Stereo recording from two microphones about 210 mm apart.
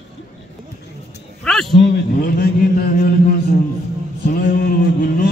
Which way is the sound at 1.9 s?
45° left (ahead or behind).